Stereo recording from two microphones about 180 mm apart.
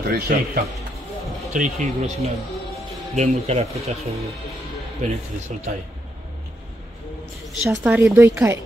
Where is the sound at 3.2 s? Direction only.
35° right (ahead or behind).